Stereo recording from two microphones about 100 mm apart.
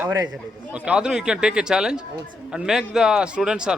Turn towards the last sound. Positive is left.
turn(degrees=-5)  # may be behind; listen again after turning